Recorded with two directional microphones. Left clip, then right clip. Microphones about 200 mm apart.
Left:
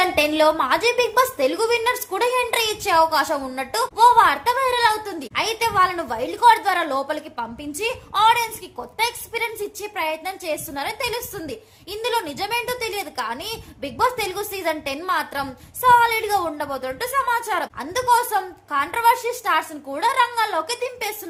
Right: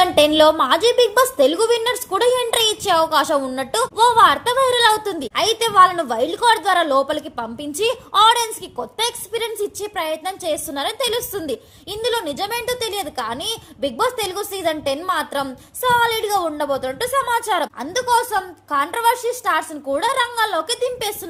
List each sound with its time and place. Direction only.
0.0 s a woman's voice: 25° right (ahead or behind)